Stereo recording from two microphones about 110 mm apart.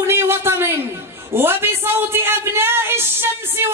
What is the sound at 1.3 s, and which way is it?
A man's voice, 20° right (ahead or behind).